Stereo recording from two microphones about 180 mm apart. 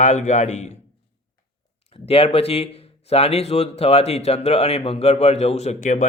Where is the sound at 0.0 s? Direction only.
40° left (ahead or behind).